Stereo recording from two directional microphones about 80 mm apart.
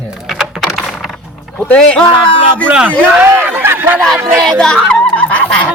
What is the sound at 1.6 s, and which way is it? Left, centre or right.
Speech, centre.